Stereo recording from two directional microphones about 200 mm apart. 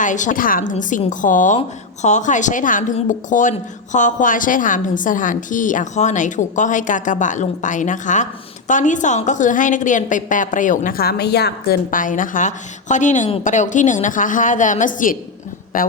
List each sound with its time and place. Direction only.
0.0 s a woman's voice: 40° left (ahead or behind)